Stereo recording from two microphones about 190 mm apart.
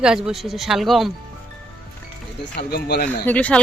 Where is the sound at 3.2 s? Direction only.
5° left (ahead or behind).